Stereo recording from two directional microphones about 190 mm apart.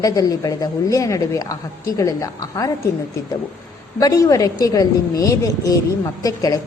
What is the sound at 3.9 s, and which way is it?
A woman's voice, 15° left (ahead or behind).